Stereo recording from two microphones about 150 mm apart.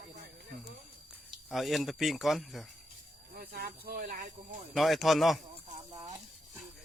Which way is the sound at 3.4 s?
85° right.